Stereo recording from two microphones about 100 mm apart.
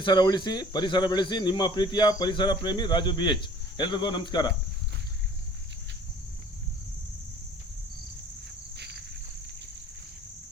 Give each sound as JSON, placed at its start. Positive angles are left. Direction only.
{"t": 0.0, "sound": "speech", "side_deg": 45}